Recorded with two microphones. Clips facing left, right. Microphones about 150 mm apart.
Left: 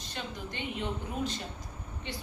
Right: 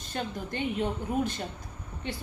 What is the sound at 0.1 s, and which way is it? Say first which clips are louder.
A woman's voice: right 6 dB; 50° right (ahead or behind).